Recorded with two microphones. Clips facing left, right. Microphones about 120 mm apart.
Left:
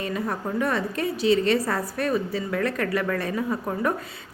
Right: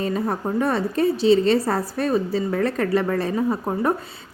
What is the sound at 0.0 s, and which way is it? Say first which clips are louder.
A woman's voice: right 4 dB; 30° right (ahead or behind).